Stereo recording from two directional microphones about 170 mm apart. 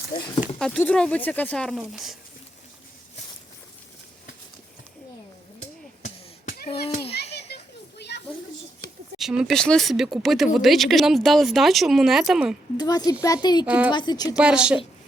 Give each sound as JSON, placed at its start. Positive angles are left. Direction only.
{"t": 0.6, "sound": "speech", "side_deg": 5}
{"t": 6.8, "sound": "children playing", "side_deg": 35}
{"t": 7.5, "sound": "children playing", "side_deg": 80}
{"t": 9.1, "sound": "speech", "side_deg": -5}
{"t": 12.7, "sound": "a woman's voice", "side_deg": 25}
{"t": 13.7, "sound": "a woman's voice", "side_deg": -10}
{"t": 13.9, "sound": "a woman's voice", "side_deg": 25}
{"t": 14.3, "sound": "speech", "side_deg": -5}